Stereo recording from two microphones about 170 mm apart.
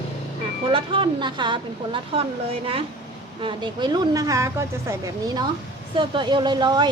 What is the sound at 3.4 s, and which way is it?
A woman's voice, 25° right (ahead or behind).